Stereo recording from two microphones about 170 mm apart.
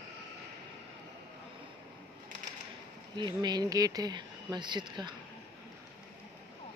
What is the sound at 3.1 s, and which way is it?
Speech, 25° right (ahead or behind).